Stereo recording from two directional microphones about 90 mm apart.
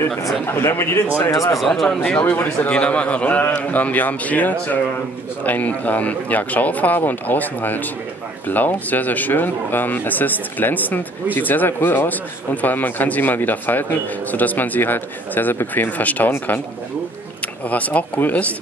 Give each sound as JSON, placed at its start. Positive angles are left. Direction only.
{"t": 0.5, "sound": "speech", "side_deg": 30}
{"t": 1.3, "sound": "speech", "side_deg": 40}
{"t": 1.6, "sound": "speech", "side_deg": 5}
{"t": 2.0, "sound": "a man's voice", "side_deg": 15}
{"t": 17.6, "sound": "a man's voice", "side_deg": 15}